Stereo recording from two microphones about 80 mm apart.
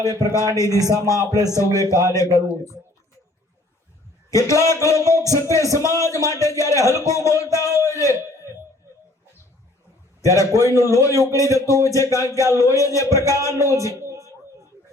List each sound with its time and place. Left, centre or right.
0.3 s speech: left
4.3 s speech: left
10.2 s a man's voice: left
12.4 s speech: right
12.6 s speech: left
14.0 s a sound: right